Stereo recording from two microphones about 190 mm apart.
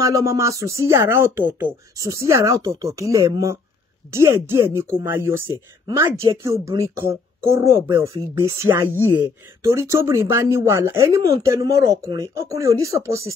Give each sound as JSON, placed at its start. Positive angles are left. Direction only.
{"t": 0.0, "sound": "speech", "side_deg": -15}